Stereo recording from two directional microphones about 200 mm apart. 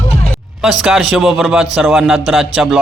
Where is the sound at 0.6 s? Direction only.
Centre (ahead or behind).